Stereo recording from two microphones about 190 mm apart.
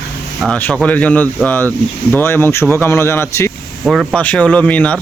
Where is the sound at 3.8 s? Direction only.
Centre (ahead or behind).